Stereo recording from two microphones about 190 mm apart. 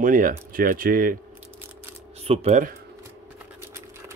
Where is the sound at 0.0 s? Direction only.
45° right (ahead or behind).